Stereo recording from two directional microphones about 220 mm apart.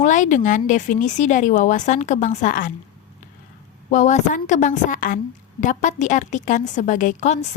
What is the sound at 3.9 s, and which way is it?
A woman's voice, 35° left (ahead or behind).